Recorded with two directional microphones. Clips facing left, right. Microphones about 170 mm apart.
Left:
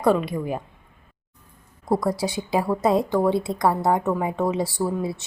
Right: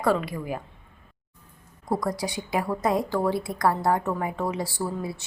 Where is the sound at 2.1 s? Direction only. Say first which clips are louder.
Left 4 dB; 25° left (ahead or behind).